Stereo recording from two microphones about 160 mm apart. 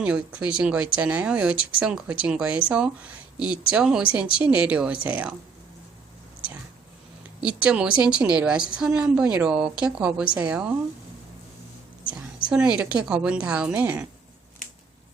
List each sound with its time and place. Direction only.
0.0 s a woman's voice: 5° right (ahead or behind)
7.4 s a woman's voice: 5° right (ahead or behind)
12.5 s a woman's voice: 5° right (ahead or behind)